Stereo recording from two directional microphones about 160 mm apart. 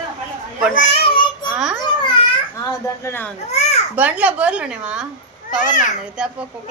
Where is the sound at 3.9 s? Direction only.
10° right (ahead or behind).